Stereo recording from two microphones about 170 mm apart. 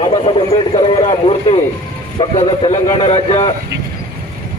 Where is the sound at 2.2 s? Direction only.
30° left (ahead or behind).